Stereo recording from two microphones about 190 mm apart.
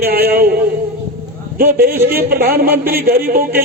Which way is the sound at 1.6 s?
55° right (ahead or behind).